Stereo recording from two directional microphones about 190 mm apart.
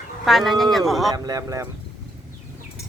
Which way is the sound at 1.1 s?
20° right (ahead or behind).